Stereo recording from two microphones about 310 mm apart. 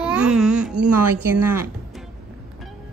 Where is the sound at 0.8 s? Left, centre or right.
Right.